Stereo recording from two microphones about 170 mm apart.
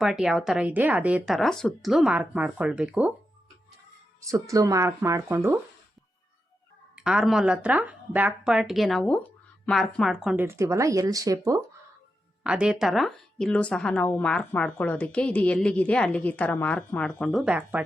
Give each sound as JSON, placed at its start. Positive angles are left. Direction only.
{"t": 0.0, "sound": "speech", "side_deg": 0}
{"t": 4.2, "sound": "speech", "side_deg": -20}
{"t": 6.9, "sound": "speech", "side_deg": -5}
{"t": 10.4, "sound": "speech", "side_deg": -15}
{"t": 12.4, "sound": "a woman's voice", "side_deg": -5}